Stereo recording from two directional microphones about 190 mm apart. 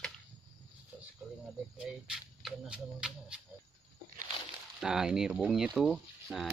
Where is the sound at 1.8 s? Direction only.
5° right (ahead or behind).